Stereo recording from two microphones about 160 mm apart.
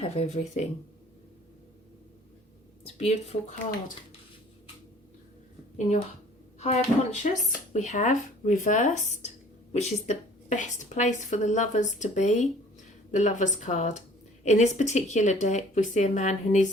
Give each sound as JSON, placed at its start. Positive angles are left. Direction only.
{"t": 0.0, "sound": "speech", "side_deg": 40}
{"t": 2.8, "sound": "speech", "side_deg": 40}
{"t": 6.6, "sound": "speech", "side_deg": 45}